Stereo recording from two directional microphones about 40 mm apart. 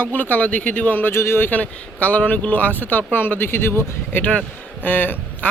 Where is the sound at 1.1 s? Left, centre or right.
Left.